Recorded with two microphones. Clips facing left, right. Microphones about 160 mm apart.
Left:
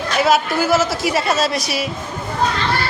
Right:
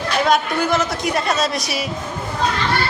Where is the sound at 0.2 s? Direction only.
5° left (ahead or behind).